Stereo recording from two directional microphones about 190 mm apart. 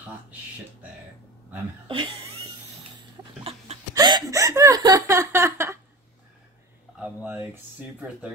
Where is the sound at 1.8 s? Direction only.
25° right (ahead or behind).